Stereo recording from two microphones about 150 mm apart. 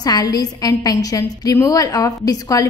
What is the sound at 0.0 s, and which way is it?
A woman's voice, 25° left (ahead or behind).